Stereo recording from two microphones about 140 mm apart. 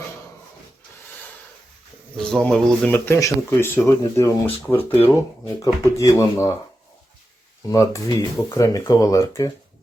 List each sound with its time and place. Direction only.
2.1 s speech: 5° left (ahead or behind); by 6.5 s 20° left (ahead or behind)
7.7 s speech: 25° left (ahead or behind)